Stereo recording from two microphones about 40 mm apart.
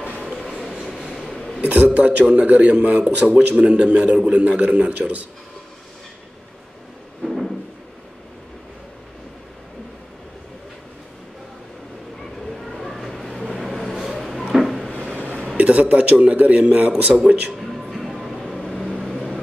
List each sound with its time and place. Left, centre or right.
0.3 s train: centre
1.1 s a sound: centre
1.6 s a man's voice: right
7.2 s a sound: centre
12.4 s vehicle: centre
14.5 s a sound: centre
15.5 s a man's voice: right
17.6 s music: centre
17.9 s vehicle: centre
19.0 s vehicle: centre